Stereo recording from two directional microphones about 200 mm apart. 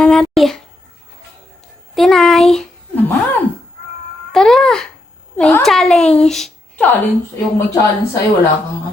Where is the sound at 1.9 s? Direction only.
Centre (ahead or behind).